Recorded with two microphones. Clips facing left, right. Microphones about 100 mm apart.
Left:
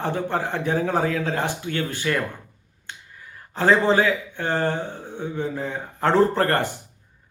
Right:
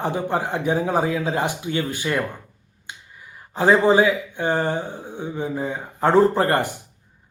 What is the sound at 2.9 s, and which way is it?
Finger snapping, 15° right (ahead or behind).